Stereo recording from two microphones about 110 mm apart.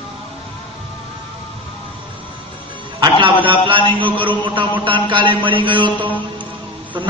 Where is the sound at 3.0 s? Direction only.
50° right (ahead or behind).